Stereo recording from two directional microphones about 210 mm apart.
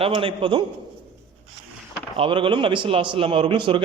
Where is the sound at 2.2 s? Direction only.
25° right (ahead or behind).